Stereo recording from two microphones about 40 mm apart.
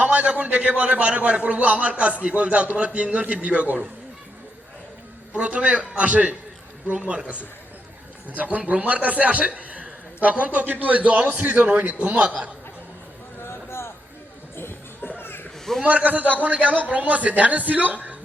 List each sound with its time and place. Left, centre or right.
0.0 s a man's voice: right
5.3 s a man's voice: right
13.4 s a sound: left
15.8 s a man's voice: right